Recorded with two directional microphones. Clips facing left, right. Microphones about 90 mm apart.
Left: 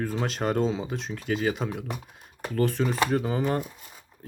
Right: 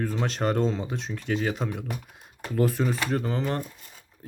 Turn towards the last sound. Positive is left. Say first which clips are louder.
# left 2 dB
turn(degrees=10)  # may be behind; listen again after turning